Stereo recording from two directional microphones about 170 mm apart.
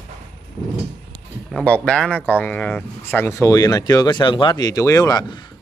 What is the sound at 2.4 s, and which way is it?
Speech, 10° left (ahead or behind).